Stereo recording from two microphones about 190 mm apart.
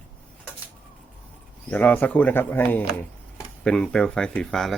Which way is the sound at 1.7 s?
10° left (ahead or behind).